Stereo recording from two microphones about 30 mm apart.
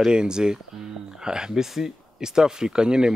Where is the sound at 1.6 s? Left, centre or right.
Centre.